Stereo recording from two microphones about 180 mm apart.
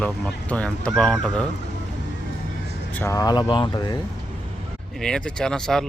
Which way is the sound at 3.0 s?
15° left (ahead or behind).